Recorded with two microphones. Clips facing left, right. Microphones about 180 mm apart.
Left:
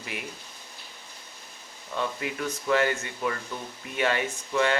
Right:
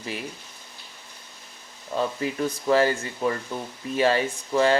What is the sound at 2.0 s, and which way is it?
Speech, 35° right (ahead or behind).